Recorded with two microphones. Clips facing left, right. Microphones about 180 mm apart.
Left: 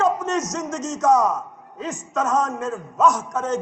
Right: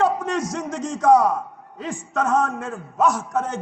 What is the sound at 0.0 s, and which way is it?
A man's voice, 45° left (ahead or behind).